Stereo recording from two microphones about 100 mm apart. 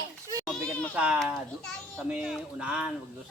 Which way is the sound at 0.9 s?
15° right (ahead or behind).